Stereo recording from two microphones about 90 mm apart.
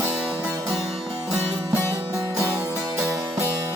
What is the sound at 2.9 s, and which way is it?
Music, 35° right (ahead or behind).